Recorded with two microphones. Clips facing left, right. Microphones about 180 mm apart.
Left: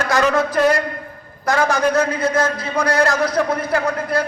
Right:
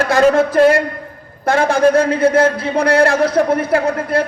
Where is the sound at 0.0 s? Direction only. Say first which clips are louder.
Right 5 dB; 30° right (ahead or behind).